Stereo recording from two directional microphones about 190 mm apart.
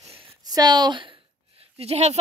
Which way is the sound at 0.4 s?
20° right (ahead or behind).